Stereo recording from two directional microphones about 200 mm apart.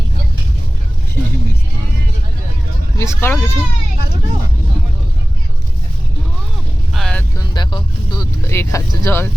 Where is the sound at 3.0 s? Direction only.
15° left (ahead or behind).